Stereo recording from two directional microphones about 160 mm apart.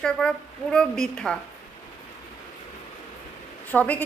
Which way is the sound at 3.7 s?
10° left (ahead or behind).